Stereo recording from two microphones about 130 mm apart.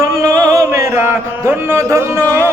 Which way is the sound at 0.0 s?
25° right (ahead or behind).